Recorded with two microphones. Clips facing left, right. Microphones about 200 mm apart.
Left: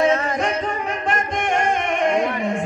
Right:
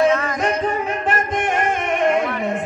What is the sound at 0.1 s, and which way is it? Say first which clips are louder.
Music: even; 35° left (ahead or behind).